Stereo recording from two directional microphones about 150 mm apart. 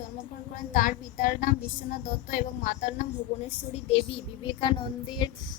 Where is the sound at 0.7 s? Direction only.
65° left (ahead or behind).